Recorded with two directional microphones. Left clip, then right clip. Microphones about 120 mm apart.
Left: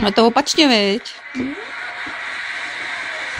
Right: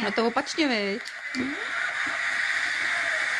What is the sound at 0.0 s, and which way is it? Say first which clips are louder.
Speech: left 11 dB; 40° left (ahead or behind).